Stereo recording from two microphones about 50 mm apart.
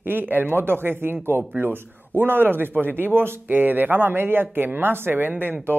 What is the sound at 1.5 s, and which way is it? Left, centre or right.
A man's voice, right.